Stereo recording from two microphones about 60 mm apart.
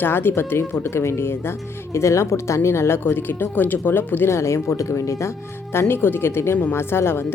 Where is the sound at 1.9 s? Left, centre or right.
Left.